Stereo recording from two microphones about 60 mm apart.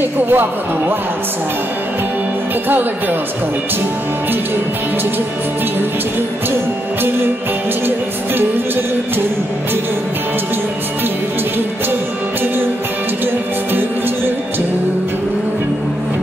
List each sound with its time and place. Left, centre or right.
0.3 s speech: right